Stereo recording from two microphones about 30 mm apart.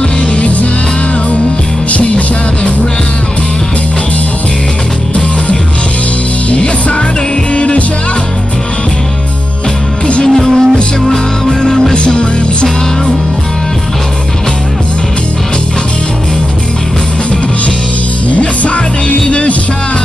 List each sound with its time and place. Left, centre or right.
1.9 s music: left
7.5 s music: left
10.2 s music: centre
11.9 s music: left
18.3 s music: left
19.1 s music: left